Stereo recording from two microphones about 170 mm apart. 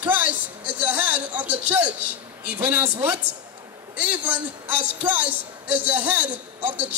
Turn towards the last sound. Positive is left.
turn(degrees=-10)  # may be behind; listen again after turning